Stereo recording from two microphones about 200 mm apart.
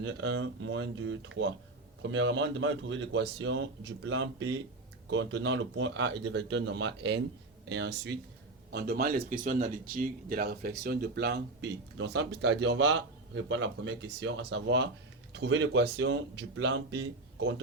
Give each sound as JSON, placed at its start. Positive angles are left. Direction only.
{"t": 0.0, "sound": "speech", "side_deg": -65}